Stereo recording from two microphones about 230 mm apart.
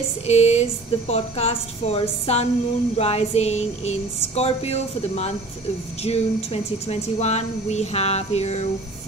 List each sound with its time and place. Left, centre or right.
0.3 s speech: left